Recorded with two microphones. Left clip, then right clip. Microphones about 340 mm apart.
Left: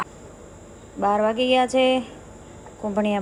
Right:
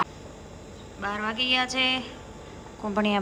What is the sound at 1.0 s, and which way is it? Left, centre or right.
A woman's voice, centre.